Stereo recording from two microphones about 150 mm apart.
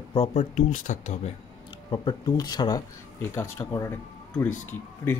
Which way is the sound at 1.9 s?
30° left (ahead or behind).